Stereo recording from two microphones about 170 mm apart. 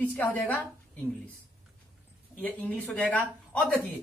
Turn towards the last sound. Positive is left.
turn(degrees=5)  # may be behind; listen again after turning